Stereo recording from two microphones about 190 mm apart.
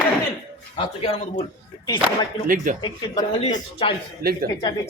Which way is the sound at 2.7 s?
45° right (ahead or behind).